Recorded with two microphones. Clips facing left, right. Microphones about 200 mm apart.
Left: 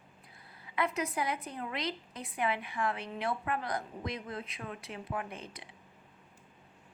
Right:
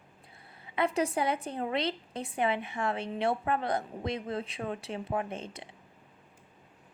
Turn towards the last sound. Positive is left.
turn(degrees=-25)  # may be behind; listen again after turning